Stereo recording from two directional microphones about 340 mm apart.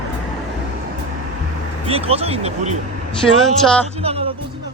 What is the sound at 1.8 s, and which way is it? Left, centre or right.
Speech, centre.